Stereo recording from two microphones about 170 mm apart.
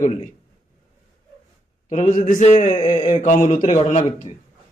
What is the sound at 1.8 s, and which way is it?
A man's voice, 45° left (ahead or behind).